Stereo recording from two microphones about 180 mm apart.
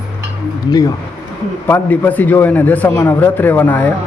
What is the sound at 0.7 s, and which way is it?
A man's voice, 20° left (ahead or behind).